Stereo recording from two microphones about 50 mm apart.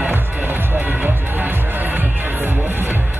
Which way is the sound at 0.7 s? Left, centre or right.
Right.